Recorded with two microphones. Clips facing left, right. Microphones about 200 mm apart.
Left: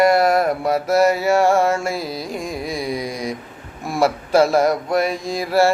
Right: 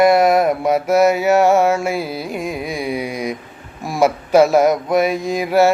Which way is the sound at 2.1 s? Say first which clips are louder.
Right 2 dB; 30° left (ahead or behind).